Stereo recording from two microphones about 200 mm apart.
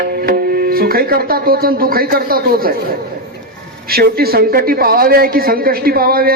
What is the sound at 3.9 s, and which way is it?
A man's voice, 50° right (ahead or behind).